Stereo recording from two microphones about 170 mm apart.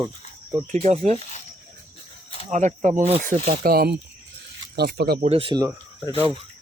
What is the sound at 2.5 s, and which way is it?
Speech, 45° right (ahead or behind).